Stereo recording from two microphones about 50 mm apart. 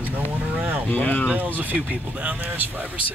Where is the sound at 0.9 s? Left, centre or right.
Left.